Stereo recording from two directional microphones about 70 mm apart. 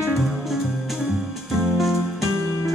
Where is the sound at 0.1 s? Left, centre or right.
Centre.